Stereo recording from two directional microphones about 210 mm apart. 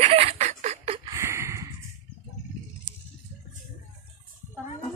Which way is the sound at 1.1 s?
15° right (ahead or behind).